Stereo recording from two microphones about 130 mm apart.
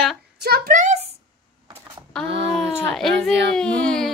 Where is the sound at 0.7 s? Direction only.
70° right (ahead or behind).